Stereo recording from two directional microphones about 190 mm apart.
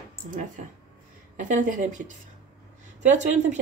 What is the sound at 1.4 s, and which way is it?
A woman's voice, 40° right (ahead or behind).